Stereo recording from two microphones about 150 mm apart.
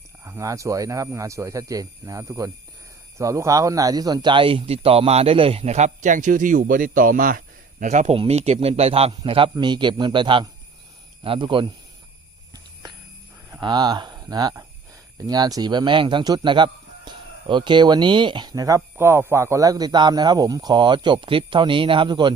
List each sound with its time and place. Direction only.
0.3 s speech: 20° right (ahead or behind)
13.6 s speech: 30° right (ahead or behind)